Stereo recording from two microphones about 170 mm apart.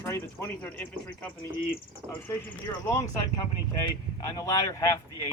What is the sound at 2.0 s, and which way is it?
Speech, 20° right (ahead or behind).